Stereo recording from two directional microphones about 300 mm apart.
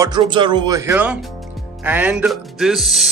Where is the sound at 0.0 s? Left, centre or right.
Centre.